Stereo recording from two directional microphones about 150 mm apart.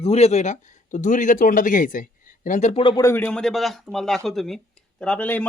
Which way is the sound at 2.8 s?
25° left (ahead or behind).